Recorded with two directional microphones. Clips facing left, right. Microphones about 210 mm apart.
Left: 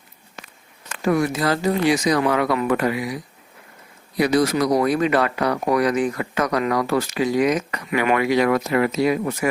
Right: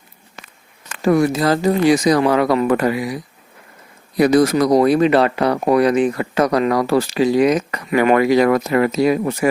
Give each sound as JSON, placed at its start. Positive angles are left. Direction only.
{"t": 1.0, "sound": "speech", "side_deg": -35}
{"t": 4.2, "sound": "speech", "side_deg": -45}
{"t": 4.8, "sound": "speech", "side_deg": -30}